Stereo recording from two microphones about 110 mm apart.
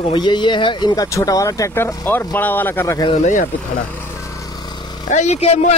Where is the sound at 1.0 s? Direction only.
30° left (ahead or behind).